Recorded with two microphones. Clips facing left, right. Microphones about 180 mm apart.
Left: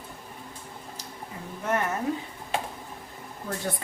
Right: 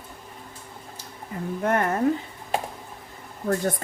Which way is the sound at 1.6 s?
55° right (ahead or behind).